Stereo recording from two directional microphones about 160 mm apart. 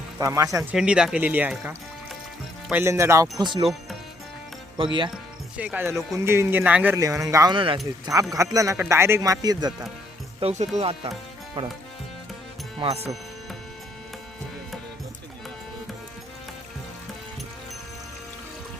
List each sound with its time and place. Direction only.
0.2 s speech: 20° right (ahead or behind)
0.7 s speech: 5° right (ahead or behind); by 3.7 s 30° right (ahead or behind)
4.8 s speech: 30° right (ahead or behind)
5.5 s speech: 10° right (ahead or behind)
7.0 s speech: 20° right (ahead or behind)
7.5 s speech: 30° right (ahead or behind)
8.0 s speech: 20° right (ahead or behind)
10.4 s speech: 45° right (ahead or behind)